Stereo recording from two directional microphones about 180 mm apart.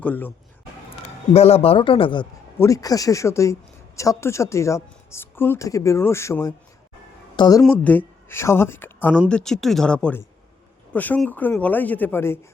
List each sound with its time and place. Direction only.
0.0 s speech: 10° left (ahead or behind)
1.3 s a man's voice: 35° left (ahead or behind)
2.6 s speech: 20° left (ahead or behind)
7.6 s speech: 10° left (ahead or behind)